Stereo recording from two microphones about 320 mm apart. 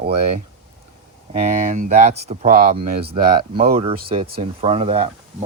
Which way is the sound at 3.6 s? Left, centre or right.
Centre.